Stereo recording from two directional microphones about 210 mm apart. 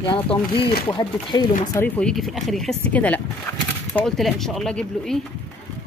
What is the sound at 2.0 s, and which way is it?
Speech, 5° left (ahead or behind).